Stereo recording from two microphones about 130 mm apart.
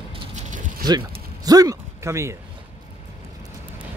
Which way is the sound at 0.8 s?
30° right (ahead or behind).